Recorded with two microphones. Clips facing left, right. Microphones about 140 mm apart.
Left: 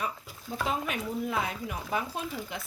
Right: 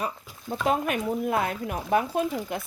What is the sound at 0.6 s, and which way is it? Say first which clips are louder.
Speech: right 6 dB; 55° right (ahead or behind).